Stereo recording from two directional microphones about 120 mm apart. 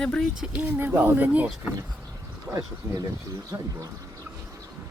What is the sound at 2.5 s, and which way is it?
Speech, 30° right (ahead or behind).